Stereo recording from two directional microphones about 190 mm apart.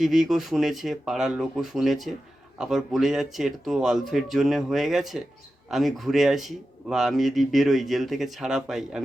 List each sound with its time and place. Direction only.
0.0 s speech: centre (ahead or behind)